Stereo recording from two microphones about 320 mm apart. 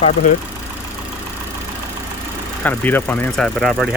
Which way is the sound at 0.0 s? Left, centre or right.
Left.